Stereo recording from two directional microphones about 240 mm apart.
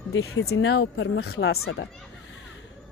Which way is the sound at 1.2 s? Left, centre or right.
Left.